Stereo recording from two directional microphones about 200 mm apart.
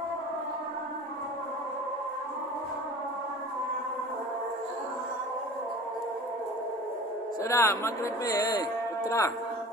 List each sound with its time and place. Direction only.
7.4 s speech: 15° left (ahead or behind)